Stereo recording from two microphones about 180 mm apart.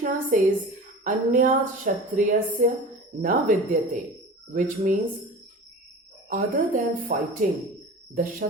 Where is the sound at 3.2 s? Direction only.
50° right (ahead or behind).